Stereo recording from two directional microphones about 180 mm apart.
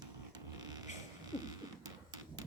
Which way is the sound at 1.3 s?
20° right (ahead or behind).